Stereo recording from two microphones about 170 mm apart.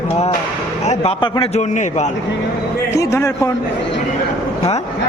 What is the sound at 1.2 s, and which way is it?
Speech, 30° left (ahead or behind).